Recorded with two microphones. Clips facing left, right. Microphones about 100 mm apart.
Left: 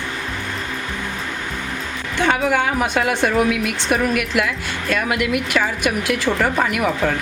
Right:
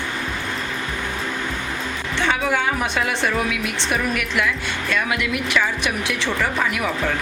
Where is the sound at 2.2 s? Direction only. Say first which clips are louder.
Left 4 dB; 50° left (ahead or behind).